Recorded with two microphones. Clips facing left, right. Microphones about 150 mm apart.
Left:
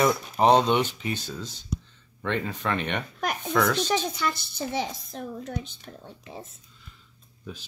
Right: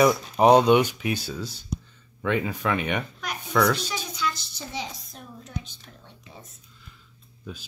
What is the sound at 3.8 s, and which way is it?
A child's voice, 55° left (ahead or behind).